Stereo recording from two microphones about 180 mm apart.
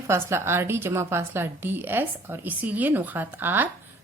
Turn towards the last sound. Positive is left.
turn(degrees=-10)  # may be behind; listen again after turning